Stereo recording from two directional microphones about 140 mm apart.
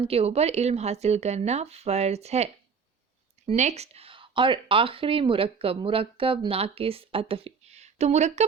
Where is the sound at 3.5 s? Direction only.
55° right (ahead or behind).